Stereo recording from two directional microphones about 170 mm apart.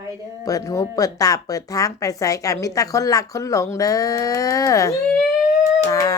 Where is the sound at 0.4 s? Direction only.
20° left (ahead or behind).